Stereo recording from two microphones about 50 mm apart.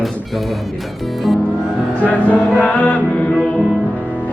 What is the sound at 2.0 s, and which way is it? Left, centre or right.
Music, left.